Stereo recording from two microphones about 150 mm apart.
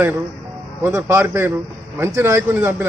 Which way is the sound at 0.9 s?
20° right (ahead or behind).